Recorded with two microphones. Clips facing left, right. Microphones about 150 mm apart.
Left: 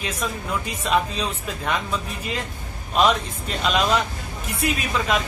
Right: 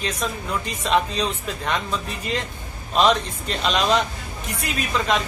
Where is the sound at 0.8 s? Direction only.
5° left (ahead or behind).